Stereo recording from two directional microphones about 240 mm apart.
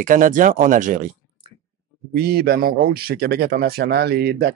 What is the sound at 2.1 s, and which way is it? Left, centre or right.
Speech, right.